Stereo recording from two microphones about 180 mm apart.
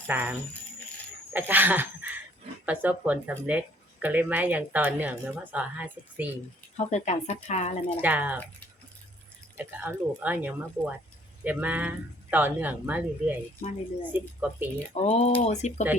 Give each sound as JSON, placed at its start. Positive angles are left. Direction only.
{"t": 0.1, "sound": "a woman's voice", "side_deg": -10}
{"t": 6.7, "sound": "speech", "side_deg": 40}
{"t": 8.0, "sound": "a woman's voice", "side_deg": -10}
{"t": 9.6, "sound": "a woman's voice", "side_deg": -10}
{"t": 14.9, "sound": "speech", "side_deg": 40}